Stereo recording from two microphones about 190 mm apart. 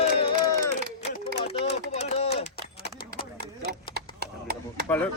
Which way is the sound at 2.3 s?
60° left (ahead or behind).